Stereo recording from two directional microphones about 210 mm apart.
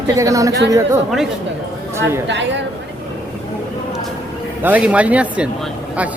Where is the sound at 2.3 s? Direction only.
60° right (ahead or behind).